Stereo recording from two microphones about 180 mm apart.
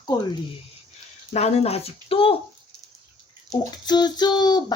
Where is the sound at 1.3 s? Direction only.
35° left (ahead or behind).